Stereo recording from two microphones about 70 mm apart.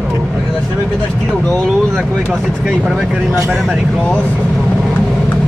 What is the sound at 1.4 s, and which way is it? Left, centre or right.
Speech, centre.